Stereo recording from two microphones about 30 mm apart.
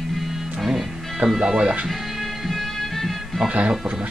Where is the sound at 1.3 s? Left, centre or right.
Right.